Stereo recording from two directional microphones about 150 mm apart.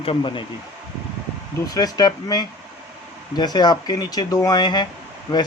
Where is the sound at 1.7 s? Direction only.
25° left (ahead or behind).